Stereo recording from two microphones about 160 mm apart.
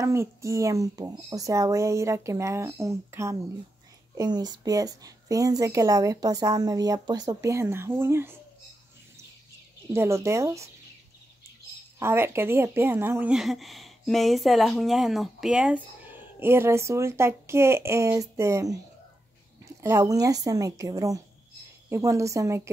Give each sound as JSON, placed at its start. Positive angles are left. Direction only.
{"t": 0.0, "sound": "speech", "side_deg": -20}
{"t": 9.9, "sound": "speech", "side_deg": -20}
{"t": 12.0, "sound": "speech", "side_deg": -15}